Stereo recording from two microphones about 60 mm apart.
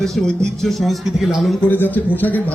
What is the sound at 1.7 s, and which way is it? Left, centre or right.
Speech, left.